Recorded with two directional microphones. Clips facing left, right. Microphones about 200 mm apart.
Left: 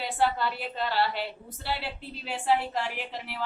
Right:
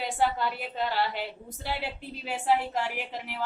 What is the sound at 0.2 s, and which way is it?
A woman's voice, 15° right (ahead or behind).